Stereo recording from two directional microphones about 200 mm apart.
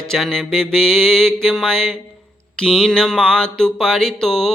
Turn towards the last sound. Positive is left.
turn(degrees=5)  # may be behind; listen again after turning